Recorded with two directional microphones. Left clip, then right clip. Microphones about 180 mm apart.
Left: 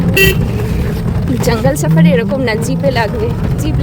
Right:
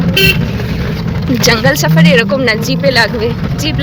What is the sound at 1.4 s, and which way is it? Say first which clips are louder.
Speech: right 4 dB; 15° left (ahead or behind).